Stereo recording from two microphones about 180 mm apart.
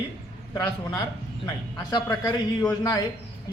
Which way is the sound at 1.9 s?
20° left (ahead or behind).